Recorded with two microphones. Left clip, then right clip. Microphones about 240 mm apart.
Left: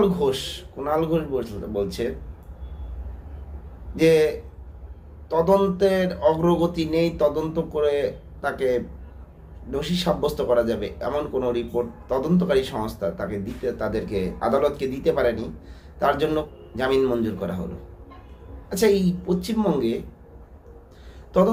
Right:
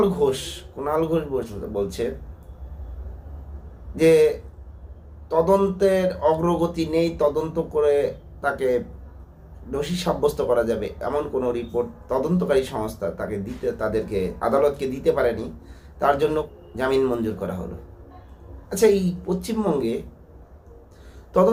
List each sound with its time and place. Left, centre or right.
0.0 s a man's voice: centre
3.9 s a man's voice: centre
5.3 s a man's voice: centre
18.7 s speech: centre